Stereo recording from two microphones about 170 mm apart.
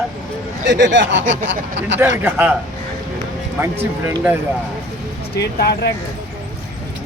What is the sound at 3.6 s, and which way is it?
Speech, 15° right (ahead or behind).